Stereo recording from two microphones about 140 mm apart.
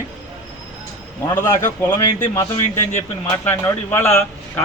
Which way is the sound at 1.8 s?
30° left (ahead or behind).